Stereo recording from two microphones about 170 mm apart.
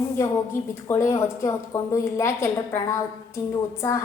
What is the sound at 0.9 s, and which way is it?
A woman's voice, 15° left (ahead or behind).